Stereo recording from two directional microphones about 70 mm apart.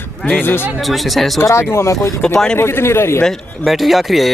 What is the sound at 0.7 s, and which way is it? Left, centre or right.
Speech, centre.